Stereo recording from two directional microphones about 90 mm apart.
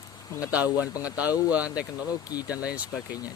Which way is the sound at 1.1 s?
15° right (ahead or behind).